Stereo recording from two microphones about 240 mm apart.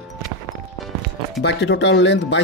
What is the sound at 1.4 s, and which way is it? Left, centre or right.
Speech, left.